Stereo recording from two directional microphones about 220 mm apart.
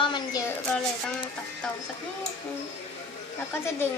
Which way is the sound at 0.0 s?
20° left (ahead or behind).